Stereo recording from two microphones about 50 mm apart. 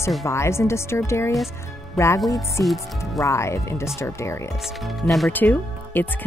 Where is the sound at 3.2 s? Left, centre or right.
Left.